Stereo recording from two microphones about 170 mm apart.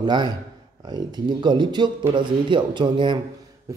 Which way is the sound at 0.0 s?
25° right (ahead or behind).